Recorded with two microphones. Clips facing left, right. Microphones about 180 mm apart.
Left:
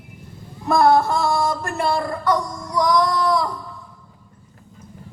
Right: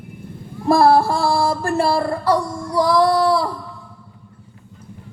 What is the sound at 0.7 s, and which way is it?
Child singing, 30° right (ahead or behind).